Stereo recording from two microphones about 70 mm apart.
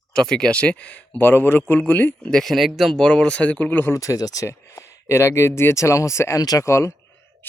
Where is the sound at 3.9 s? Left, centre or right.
Left.